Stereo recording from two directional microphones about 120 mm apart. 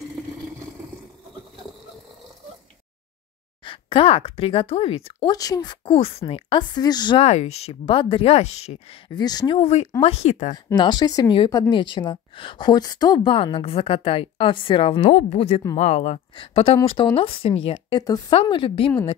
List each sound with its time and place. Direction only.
3.6 s speech: 45° left (ahead or behind)
5.2 s speech: 30° left (ahead or behind)
7.2 s speech: 65° left (ahead or behind)
9.1 s speech: 35° left (ahead or behind)
9.6 s speech: 65° left (ahead or behind)
10.5 s a woman's voice: 40° left (ahead or behind)